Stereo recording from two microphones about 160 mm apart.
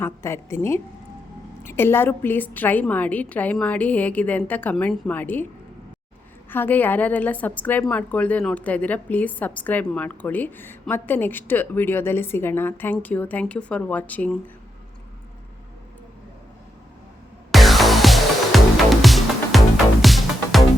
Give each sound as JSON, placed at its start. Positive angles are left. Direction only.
{"t": 0.0, "sound": "a woman's voice", "side_deg": 15}
{"t": 6.5, "sound": "a woman's voice", "side_deg": 10}
{"t": 17.5, "sound": "music", "side_deg": 0}